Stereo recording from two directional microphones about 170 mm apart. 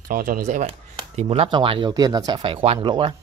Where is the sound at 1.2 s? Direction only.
35° right (ahead or behind).